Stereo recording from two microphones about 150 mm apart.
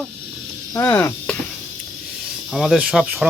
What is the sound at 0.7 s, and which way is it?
Cricket, 20° left (ahead or behind).